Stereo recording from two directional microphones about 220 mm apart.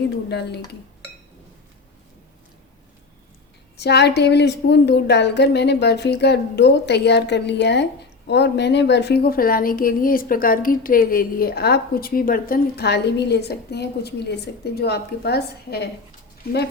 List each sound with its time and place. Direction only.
0.3 s a woman's voice: 50° left (ahead or behind)
3.8 s a woman's voice: 50° left (ahead or behind)